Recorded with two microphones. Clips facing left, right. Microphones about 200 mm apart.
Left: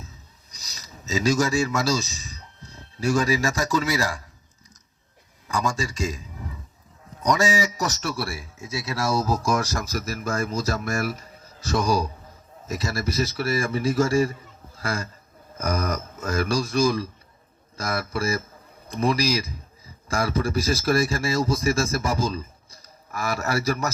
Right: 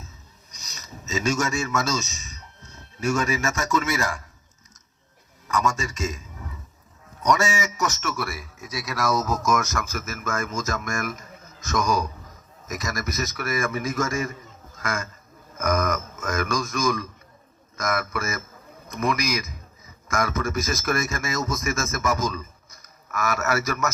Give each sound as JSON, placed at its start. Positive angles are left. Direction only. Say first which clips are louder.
{"t": 0.5, "sound": "speech", "louder": "right 3 dB", "side_deg": 35}
{"t": 5.5, "sound": "a man's voice", "louder": "right 1 dB", "side_deg": 30}